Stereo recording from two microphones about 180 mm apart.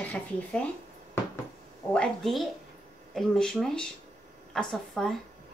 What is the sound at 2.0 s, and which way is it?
Speech, centre (ahead or behind).